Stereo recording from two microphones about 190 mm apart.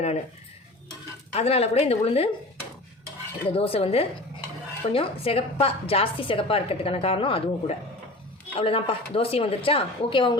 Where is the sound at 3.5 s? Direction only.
30° left (ahead or behind).